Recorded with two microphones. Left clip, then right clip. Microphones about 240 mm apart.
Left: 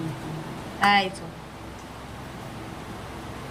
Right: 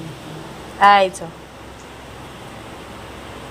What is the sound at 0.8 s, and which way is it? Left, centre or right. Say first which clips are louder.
Speech: right 9 dB; right.